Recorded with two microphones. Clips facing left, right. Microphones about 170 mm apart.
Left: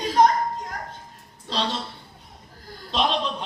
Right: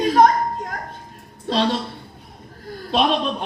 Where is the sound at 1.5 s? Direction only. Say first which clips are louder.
Right 7 dB; 60° right (ahead or behind).